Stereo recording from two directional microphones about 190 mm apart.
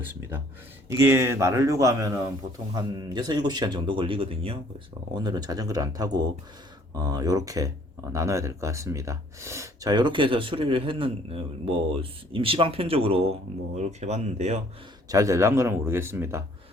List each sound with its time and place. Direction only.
0.9 s speech: 15° right (ahead or behind); by 14.6 s 35° right (ahead or behind)
15.1 s speech: 15° right (ahead or behind)